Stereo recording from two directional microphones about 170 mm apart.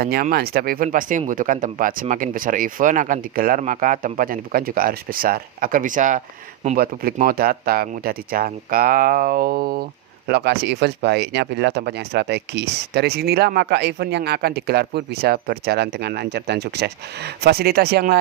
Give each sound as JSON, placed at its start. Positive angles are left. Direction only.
{"t": 0.0, "sound": "speech", "side_deg": -60}
{"t": 6.7, "sound": "speech", "side_deg": -60}
{"t": 10.2, "sound": "speech", "side_deg": -70}